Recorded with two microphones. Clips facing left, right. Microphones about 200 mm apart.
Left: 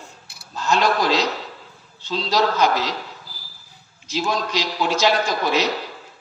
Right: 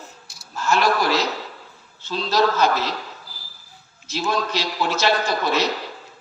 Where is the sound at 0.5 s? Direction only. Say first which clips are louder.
Even; 20° left (ahead or behind).